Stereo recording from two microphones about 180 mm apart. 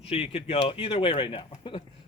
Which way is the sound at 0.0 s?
35° left (ahead or behind).